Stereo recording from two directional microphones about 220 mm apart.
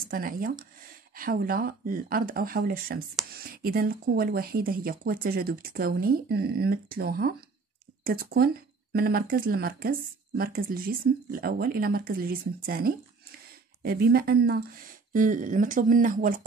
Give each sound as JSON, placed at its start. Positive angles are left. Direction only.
{"t": 0.1, "sound": "speech", "side_deg": -40}